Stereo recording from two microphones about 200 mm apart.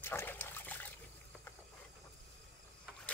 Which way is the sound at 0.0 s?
10° left (ahead or behind).